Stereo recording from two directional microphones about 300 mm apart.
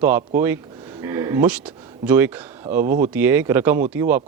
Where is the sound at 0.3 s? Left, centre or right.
Centre.